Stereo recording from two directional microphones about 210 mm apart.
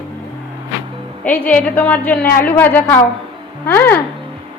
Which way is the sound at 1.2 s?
5° left (ahead or behind).